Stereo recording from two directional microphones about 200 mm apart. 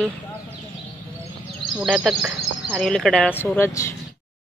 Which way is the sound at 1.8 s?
Centre (ahead or behind).